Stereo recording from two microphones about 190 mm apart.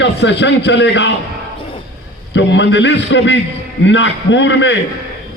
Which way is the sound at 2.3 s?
70° left (ahead or behind).